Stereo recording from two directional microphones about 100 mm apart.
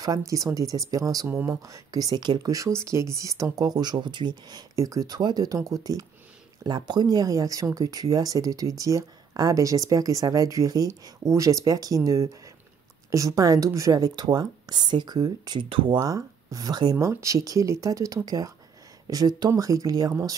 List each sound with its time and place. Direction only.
0.0 s speech: 35° right (ahead or behind)
15.7 s speech: 60° right (ahead or behind)
16.0 s speech: 30° right (ahead or behind)
16.9 s speech: 30° right (ahead or behind)